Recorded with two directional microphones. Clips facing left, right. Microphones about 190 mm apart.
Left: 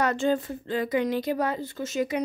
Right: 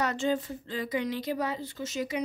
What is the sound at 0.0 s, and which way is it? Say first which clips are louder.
A woman's voice: left 4 dB; 55° left (ahead or behind).